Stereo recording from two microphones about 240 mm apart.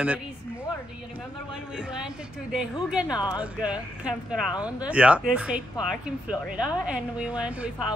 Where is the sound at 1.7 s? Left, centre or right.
Centre.